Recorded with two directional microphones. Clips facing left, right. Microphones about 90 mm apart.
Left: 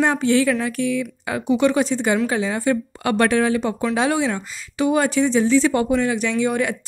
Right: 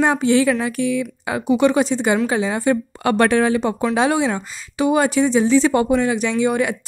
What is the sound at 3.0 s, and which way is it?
A woman's voice, 35° right (ahead or behind).